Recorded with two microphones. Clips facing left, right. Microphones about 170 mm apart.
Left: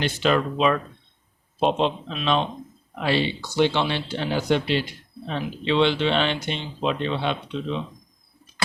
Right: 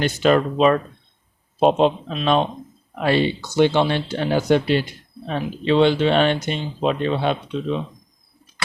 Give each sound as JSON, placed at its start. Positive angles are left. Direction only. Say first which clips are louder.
{"t": 0.0, "sound": "speech", "louder": "right 5 dB", "side_deg": -45}